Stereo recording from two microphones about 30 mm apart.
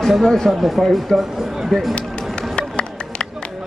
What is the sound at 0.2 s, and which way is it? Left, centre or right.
Speech, centre.